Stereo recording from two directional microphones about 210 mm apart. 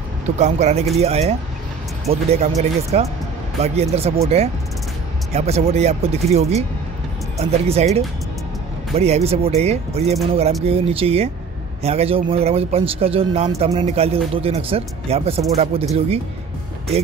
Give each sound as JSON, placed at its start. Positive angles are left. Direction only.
{"t": 0.4, "sound": "speech", "side_deg": -35}